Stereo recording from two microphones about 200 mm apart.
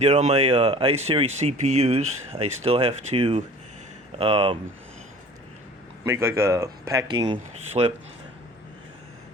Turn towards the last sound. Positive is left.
turn(degrees=-25)  # may be behind; listen again after turning